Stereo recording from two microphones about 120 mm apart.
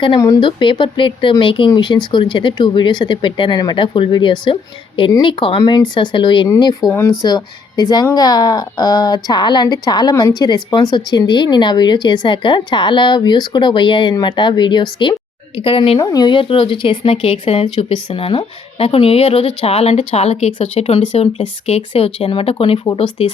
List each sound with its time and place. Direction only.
0.3 s a woman's voice: 45° left (ahead or behind)
16.0 s a woman's voice: 35° left (ahead or behind); by 23.3 s 55° left (ahead or behind)